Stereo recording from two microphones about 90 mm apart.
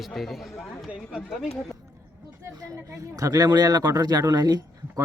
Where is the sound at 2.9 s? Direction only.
40° right (ahead or behind).